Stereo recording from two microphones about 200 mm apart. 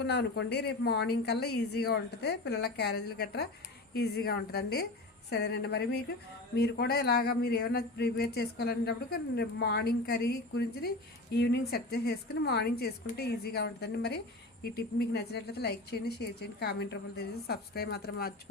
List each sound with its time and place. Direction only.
0.0 s speech: 55° left (ahead or behind)
11.3 s speech: 55° left (ahead or behind)